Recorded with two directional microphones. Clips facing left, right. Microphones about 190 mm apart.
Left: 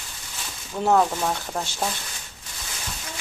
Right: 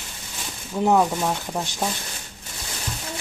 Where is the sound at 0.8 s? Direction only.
15° right (ahead or behind).